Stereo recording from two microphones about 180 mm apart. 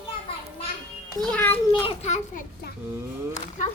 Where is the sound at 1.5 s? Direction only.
35° left (ahead or behind).